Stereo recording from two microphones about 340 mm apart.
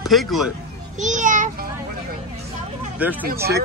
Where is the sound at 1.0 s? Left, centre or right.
Right.